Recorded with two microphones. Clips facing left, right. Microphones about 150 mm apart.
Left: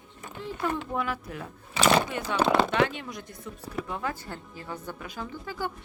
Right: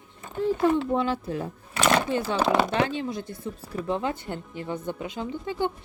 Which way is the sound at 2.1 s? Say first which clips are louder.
Right 6 dB; 30° right (ahead or behind).